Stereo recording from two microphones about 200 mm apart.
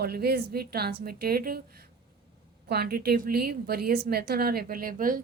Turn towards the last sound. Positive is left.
turn(degrees=-45)  # may be behind; listen again after turning